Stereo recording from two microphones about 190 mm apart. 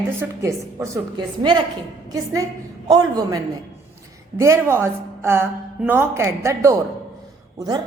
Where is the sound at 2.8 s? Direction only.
20° right (ahead or behind).